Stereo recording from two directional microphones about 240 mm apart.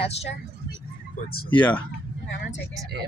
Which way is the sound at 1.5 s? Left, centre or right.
Centre.